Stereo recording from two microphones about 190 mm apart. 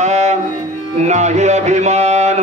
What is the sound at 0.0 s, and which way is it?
Music, 35° right (ahead or behind).